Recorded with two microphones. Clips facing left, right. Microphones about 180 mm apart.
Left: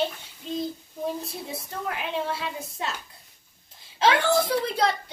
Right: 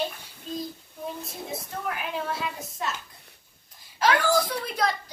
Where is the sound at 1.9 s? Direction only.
25° left (ahead or behind).